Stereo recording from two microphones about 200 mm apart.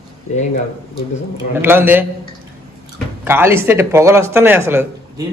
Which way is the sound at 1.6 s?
10° right (ahead or behind).